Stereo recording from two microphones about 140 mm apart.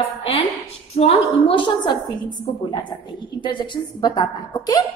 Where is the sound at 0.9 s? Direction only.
45° left (ahead or behind).